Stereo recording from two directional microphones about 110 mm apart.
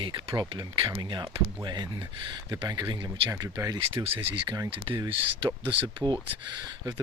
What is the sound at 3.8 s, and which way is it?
Speech, 55° right (ahead or behind).